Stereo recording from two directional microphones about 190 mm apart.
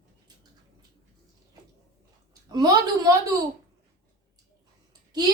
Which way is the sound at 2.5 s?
20° right (ahead or behind).